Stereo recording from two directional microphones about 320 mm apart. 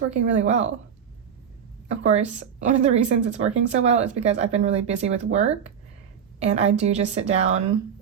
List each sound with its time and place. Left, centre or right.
0.1 s speech: right
1.9 s speech: right